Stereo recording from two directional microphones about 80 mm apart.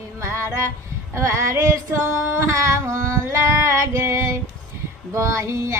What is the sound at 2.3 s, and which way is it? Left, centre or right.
Singing, right.